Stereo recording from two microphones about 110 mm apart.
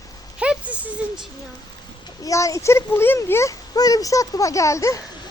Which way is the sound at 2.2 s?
30° left (ahead or behind).